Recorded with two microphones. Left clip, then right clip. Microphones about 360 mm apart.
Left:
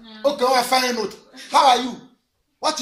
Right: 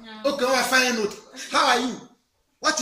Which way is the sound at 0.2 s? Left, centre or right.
Centre.